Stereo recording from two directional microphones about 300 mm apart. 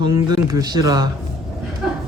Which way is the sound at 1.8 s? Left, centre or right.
Centre.